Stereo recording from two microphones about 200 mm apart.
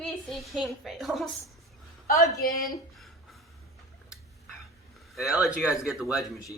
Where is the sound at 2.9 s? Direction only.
Centre (ahead or behind).